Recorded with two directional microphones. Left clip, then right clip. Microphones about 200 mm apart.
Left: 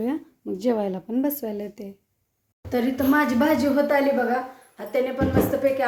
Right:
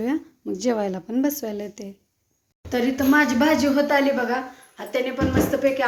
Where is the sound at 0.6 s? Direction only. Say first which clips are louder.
Even; 5° left (ahead or behind).